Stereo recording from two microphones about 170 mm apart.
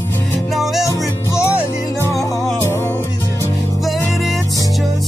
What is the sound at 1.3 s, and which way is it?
Music, 15° left (ahead or behind).